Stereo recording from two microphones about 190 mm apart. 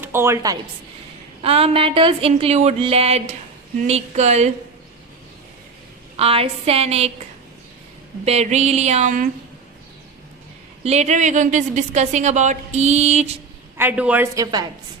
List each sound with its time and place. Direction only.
0.0 s a woman's voice: 10° right (ahead or behind)
1.4 s a woman's voice: 30° right (ahead or behind)
6.1 s a woman's voice: 30° right (ahead or behind)
8.2 s a woman's voice: 35° right (ahead or behind)
10.8 s a woman's voice: 35° right (ahead or behind)
13.7 s a man's voice: 10° right (ahead or behind)
14.4 s a woman's voice: 20° right (ahead or behind)